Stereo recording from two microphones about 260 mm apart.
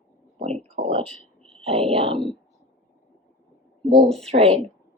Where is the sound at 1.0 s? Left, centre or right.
Centre.